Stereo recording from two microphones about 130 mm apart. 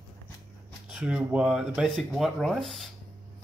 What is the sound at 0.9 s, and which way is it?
Speech, 5° right (ahead or behind).